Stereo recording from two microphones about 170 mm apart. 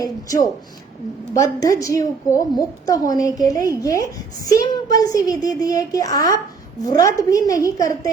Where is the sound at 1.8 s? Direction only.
20° left (ahead or behind).